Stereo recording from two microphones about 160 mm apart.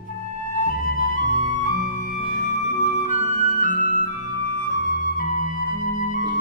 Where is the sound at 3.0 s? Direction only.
55° left (ahead or behind).